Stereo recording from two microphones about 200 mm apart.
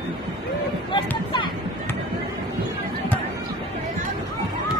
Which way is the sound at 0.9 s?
25° left (ahead or behind).